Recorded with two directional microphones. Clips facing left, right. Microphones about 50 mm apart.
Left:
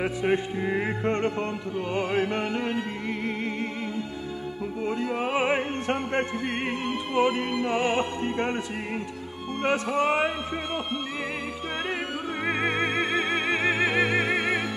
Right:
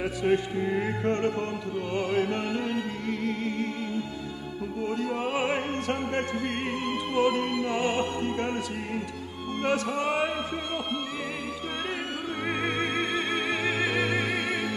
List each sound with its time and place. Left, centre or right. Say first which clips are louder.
0.0 s a man's voice: even; left
4.8 s a man's voice: left 2 dB; left
9.6 s a man's voice: left 3 dB; left
12.4 s music: left 3 dB; left